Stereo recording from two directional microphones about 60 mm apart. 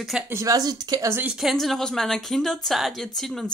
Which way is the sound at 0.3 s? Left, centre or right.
Right.